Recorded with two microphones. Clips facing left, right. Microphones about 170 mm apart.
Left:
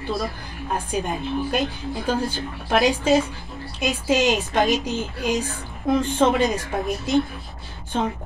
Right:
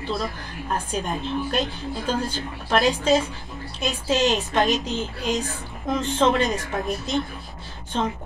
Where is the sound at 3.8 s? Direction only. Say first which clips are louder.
Left 2 dB; 15° left (ahead or behind).